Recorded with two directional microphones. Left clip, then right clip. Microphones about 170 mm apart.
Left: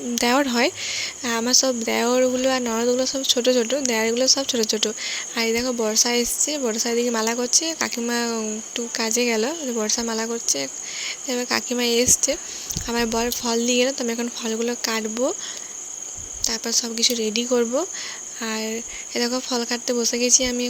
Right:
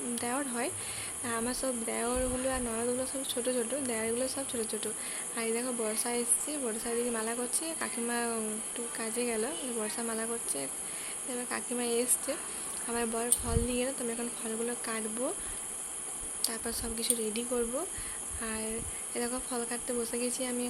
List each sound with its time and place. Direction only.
0.2 s speech: 50° left (ahead or behind)
16.5 s speech: 40° left (ahead or behind)